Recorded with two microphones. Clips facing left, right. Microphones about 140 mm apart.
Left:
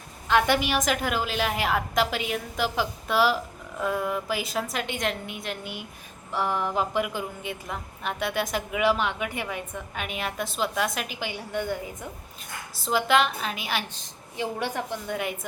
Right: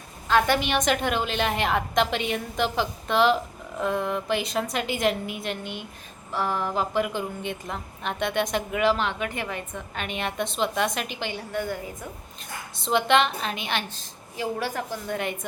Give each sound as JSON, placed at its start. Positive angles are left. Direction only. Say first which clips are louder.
{"t": 0.3, "sound": "a woman's voice", "louder": "right 1 dB", "side_deg": 15}
{"t": 6.3, "sound": "a woman's voice", "louder": "even", "side_deg": 15}
{"t": 12.8, "sound": "a woman's voice", "louder": "right 1 dB", "side_deg": 5}
{"t": 14.6, "sound": "a woman's voice", "louder": "even", "side_deg": 20}
{"t": 15.0, "sound": "a woman's voice", "louder": "right 1 dB", "side_deg": 5}